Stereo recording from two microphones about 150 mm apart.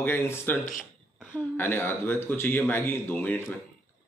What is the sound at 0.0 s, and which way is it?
Speech, 15° left (ahead or behind).